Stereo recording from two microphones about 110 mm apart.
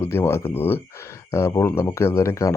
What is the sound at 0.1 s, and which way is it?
Speech, 25° left (ahead or behind).